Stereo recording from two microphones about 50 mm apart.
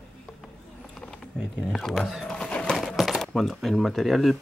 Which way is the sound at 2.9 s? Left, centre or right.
Centre.